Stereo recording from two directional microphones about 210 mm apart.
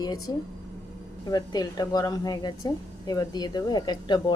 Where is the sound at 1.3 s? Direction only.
20° left (ahead or behind).